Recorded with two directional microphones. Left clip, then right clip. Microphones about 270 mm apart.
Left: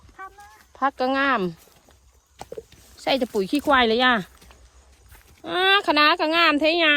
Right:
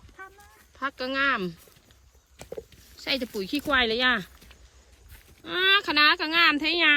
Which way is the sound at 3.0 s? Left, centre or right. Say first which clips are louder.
Left 7 dB; centre.